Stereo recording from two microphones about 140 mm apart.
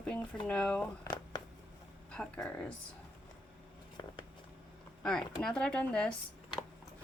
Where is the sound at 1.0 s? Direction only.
25° left (ahead or behind).